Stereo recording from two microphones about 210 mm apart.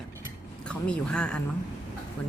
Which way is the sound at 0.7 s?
5° left (ahead or behind).